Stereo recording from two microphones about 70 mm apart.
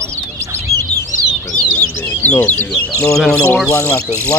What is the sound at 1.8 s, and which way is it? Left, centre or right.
Bird, left.